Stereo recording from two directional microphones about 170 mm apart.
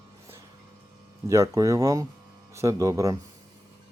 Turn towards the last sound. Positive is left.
turn(degrees=-20)  # may be behind; listen again after turning